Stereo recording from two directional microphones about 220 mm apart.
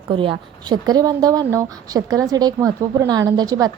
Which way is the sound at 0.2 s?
20° right (ahead or behind).